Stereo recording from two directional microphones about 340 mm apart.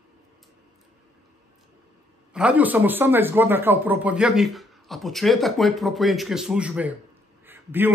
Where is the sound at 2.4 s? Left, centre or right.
Centre.